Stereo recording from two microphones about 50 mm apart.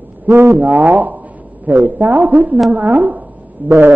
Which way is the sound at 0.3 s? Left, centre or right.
Right.